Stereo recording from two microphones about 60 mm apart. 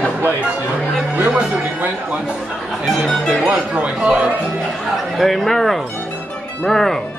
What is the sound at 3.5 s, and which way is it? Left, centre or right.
Speech, right.